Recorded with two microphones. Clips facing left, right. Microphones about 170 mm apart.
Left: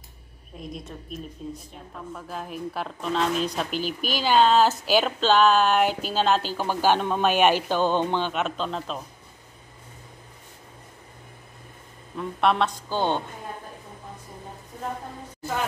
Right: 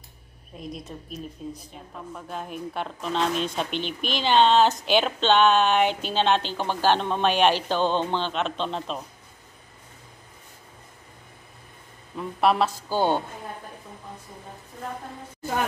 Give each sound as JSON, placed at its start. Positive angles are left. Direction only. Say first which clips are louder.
{"t": 0.6, "sound": "a woman's voice", "louder": "right 1 dB", "side_deg": 0}
{"t": 12.2, "sound": "a woman's voice", "louder": "right 1 dB", "side_deg": -5}